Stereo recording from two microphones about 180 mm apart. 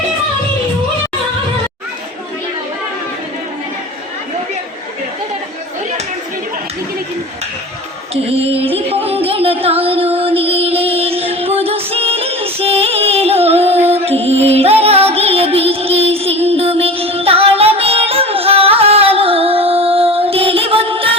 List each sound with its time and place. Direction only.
8.1 s music: 35° right (ahead or behind)